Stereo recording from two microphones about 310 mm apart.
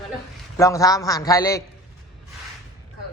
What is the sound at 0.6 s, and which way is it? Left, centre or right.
Speech, centre.